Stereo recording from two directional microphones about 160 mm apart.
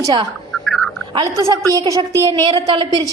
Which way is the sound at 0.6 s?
Centre (ahead or behind).